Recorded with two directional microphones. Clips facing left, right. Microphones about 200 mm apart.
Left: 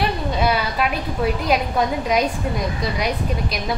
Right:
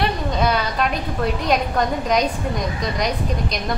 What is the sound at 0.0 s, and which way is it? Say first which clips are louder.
A woman's voice: even; 5° left (ahead or behind).